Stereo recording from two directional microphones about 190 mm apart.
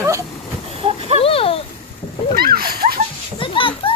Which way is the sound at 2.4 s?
50° right (ahead or behind).